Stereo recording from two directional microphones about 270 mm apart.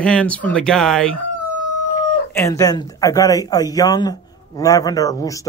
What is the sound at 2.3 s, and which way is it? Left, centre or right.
Speech, centre.